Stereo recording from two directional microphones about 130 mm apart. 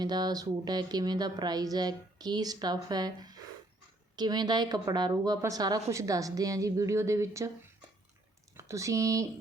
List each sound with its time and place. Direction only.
0.0 s a woman's voice: 30° right (ahead or behind)
8.5 s speech: 25° right (ahead or behind)